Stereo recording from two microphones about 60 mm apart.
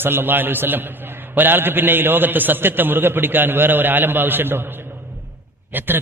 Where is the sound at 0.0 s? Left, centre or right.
Right.